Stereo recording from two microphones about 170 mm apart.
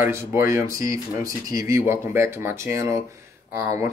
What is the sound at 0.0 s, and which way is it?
Speech, 15° right (ahead or behind).